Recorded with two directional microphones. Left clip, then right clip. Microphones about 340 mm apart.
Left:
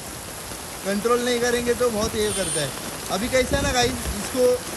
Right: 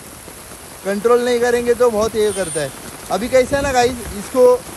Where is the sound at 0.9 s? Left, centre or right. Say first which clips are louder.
Right 7 dB; centre.